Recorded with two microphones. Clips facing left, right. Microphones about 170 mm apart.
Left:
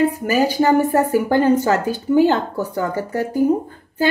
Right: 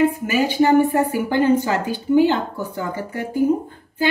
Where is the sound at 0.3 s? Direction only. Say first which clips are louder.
Left 1 dB; 40° left (ahead or behind).